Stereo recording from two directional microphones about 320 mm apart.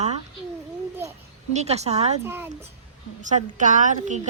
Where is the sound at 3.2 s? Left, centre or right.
Right.